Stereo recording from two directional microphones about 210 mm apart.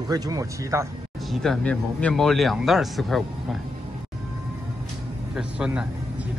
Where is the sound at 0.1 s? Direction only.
15° right (ahead or behind).